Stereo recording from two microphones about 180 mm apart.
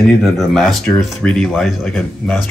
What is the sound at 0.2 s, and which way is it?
Speech, centre (ahead or behind).